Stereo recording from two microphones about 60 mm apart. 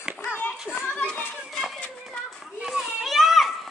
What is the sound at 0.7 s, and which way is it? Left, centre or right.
Children playing, left.